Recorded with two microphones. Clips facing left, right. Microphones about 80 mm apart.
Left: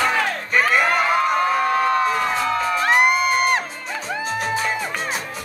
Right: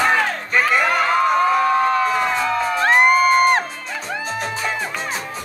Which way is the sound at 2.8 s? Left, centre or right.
Right.